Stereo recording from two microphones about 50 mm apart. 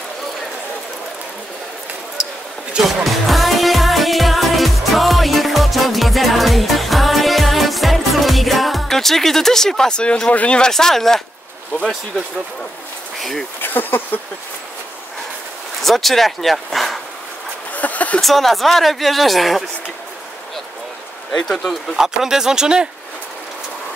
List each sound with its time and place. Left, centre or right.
2.8 s music: centre
10.3 s speech: left
10.6 s speech: centre
13.2 s speech: centre
13.6 s speech: left
15.8 s speech: centre
17.7 s a sound: left
18.2 s speech: centre
21.3 s speech: centre
21.9 s speech: centre